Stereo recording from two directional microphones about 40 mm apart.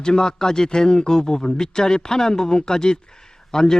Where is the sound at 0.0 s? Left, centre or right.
Centre.